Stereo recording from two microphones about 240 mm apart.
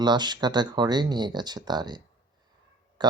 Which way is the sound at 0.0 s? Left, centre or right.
Centre.